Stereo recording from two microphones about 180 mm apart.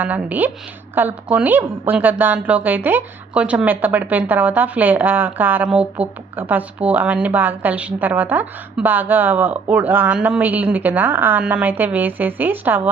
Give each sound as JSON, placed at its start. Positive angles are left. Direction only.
{"t": 0.0, "sound": "a woman's voice", "side_deg": -10}